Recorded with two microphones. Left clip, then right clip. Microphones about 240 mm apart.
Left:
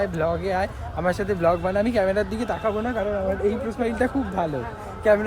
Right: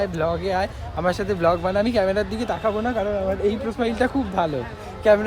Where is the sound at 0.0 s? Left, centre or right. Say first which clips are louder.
Right 1 dB; centre.